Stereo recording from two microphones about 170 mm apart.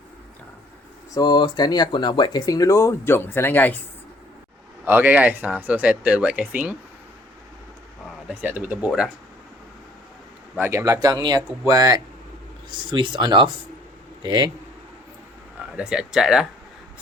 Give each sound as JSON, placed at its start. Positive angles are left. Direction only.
{"t": 1.1, "sound": "speech", "side_deg": 25}
{"t": 4.9, "sound": "speech", "side_deg": -10}
{"t": 8.3, "sound": "speech", "side_deg": -10}
{"t": 10.6, "sound": "speech", "side_deg": -15}
{"t": 15.5, "sound": "speech", "side_deg": -5}